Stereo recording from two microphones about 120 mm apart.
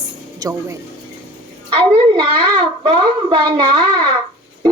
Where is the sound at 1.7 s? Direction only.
45° right (ahead or behind).